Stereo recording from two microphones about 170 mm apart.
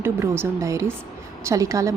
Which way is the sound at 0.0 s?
15° right (ahead or behind).